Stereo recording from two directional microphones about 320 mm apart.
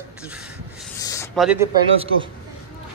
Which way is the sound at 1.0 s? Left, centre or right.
Centre.